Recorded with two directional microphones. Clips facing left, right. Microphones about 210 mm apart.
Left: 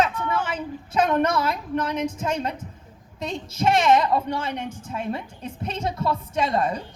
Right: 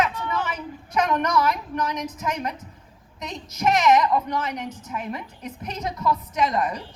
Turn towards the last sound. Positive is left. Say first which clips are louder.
# left 1 dB
turn(degrees=30)  # may be behind; listen again after turning